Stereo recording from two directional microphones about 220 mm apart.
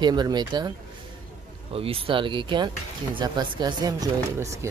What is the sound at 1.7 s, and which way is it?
Speech, 25° right (ahead or behind).